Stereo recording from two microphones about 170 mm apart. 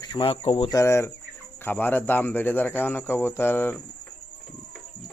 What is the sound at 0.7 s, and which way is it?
Speech, 15° left (ahead or behind).